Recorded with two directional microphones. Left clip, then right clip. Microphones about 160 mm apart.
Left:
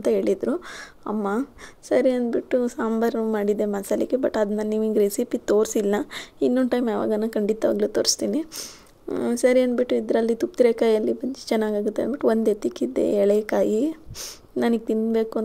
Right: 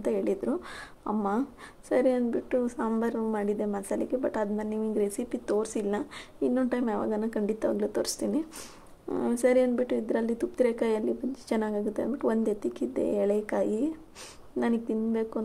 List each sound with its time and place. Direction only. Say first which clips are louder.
0.0 s a woman's voice: left 7 dB; 25° left (ahead or behind)